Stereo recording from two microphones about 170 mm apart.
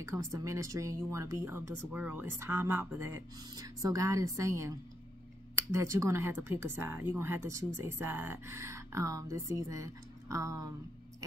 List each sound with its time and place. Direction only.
0.0 s a woman's voice: 20° right (ahead or behind)